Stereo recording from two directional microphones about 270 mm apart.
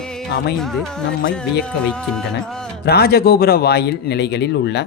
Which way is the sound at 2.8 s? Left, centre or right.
Left.